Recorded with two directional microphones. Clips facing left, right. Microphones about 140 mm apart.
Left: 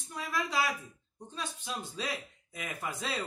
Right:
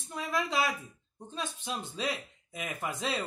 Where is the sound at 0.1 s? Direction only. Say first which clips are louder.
Right 2 dB; 25° right (ahead or behind).